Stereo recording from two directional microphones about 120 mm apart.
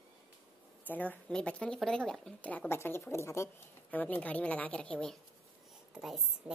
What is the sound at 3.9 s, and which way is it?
A woman's voice, 15° left (ahead or behind).